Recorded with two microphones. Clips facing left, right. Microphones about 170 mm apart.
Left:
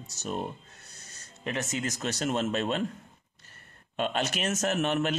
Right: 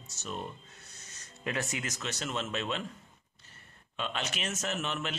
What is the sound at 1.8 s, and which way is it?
A man's voice, 40° left (ahead or behind).